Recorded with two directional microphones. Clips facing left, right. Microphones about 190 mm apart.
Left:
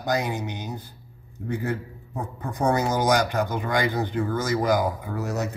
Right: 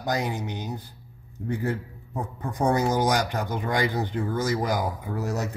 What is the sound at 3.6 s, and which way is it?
Speech, 35° right (ahead or behind).